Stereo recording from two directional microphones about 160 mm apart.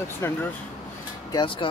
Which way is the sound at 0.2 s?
15° left (ahead or behind).